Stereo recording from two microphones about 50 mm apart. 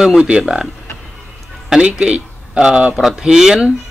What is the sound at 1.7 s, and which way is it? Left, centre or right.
Speech, right.